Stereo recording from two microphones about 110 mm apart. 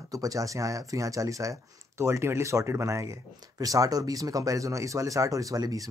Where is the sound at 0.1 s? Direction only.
30° right (ahead or behind).